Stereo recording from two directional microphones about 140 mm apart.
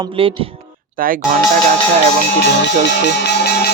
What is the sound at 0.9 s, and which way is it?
Speech, 90° right.